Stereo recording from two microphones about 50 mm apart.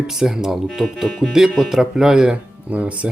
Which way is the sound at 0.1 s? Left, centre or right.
Centre.